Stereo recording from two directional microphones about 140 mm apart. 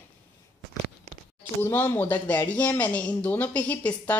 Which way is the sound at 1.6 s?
15° left (ahead or behind).